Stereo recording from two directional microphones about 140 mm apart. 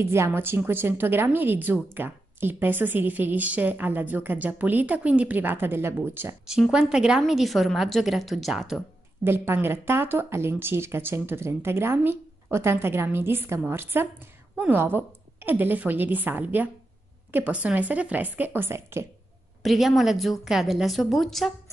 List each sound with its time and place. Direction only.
0.0 s a woman's voice: 20° right (ahead or behind)
6.4 s a woman's voice: 5° right (ahead or behind)
9.2 s a woman's voice: 15° right (ahead or behind)
19.6 s a woman's voice: centre (ahead or behind)